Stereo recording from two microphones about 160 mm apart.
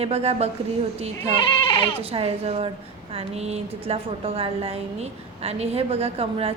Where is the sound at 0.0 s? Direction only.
40° right (ahead or behind).